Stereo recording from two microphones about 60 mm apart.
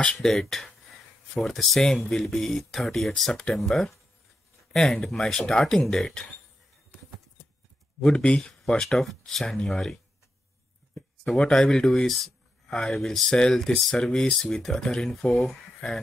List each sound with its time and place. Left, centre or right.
0.0 s speech: centre
8.0 s speech: centre
11.2 s speech: centre